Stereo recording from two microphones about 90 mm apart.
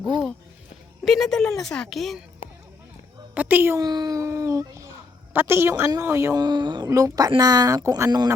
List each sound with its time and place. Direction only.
1.0 s speech: 5° left (ahead or behind)
3.3 s a woman's voice: 20° right (ahead or behind)
3.8 s a child's voice: 45° right (ahead or behind)
6.3 s speech: 50° right (ahead or behind)
6.9 s speech: 40° right (ahead or behind)